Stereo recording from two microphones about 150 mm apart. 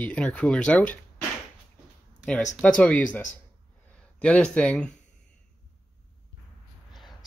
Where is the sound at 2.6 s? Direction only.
10° left (ahead or behind).